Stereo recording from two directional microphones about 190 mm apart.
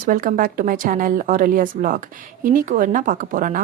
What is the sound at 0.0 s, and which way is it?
A woman's voice, 45° right (ahead or behind).